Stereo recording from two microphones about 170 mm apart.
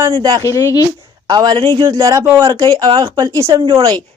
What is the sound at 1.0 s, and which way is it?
A woman's voice, 25° right (ahead or behind).